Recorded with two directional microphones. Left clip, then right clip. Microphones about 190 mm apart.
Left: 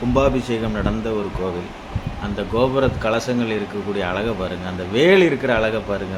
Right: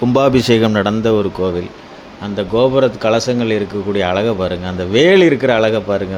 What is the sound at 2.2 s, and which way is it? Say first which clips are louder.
Speech: right 6 dB; 35° right (ahead or behind).